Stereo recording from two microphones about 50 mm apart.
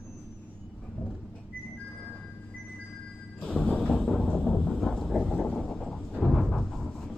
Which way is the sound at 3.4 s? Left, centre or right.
Centre.